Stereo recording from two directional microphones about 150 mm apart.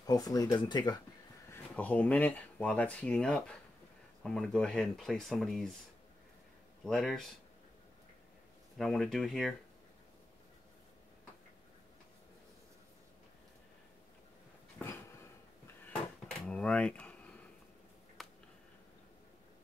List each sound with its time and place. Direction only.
0.0 s speech: 25° left (ahead or behind)
1.5 s speech: 10° left (ahead or behind)
6.8 s speech: 5° left (ahead or behind)
8.7 s speech: 5° left (ahead or behind)
15.6 s dishes: 10° left (ahead or behind)
16.4 s a sound: 5° left (ahead or behind)